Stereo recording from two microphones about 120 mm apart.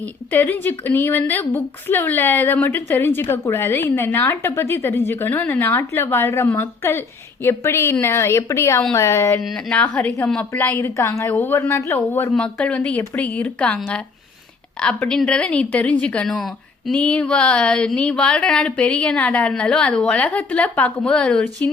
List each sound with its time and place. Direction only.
0.0 s a woman's voice: 15° left (ahead or behind)
9.4 s a woman's voice: 5° left (ahead or behind); by 12.3 s 20° left (ahead or behind)
12.3 s a woman's voice: 5° left (ahead or behind)